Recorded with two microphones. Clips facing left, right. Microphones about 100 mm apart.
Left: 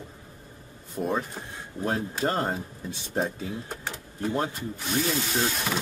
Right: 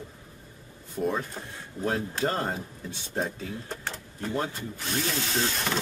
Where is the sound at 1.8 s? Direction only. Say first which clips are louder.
Left 1 dB; 10° left (ahead or behind).